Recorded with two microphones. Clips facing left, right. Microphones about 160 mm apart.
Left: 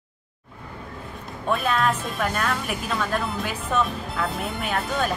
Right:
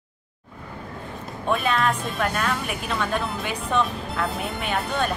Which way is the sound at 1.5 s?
Centre (ahead or behind).